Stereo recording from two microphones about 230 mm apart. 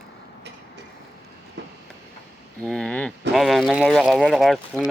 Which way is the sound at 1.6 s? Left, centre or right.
Right.